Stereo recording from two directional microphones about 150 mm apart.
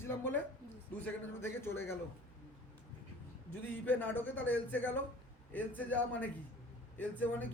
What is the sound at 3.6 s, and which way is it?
Speech, 10° left (ahead or behind).